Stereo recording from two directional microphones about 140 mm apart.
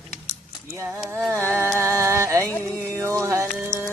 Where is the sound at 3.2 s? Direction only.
20° right (ahead or behind).